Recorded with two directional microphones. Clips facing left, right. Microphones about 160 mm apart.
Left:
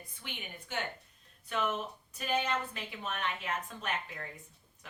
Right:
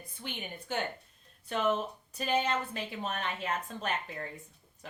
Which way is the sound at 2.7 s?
35° right (ahead or behind).